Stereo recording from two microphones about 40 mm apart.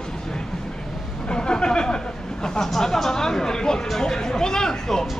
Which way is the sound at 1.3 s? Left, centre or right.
Left.